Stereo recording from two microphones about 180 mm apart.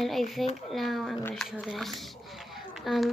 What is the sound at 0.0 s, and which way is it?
Speech, centre (ahead or behind).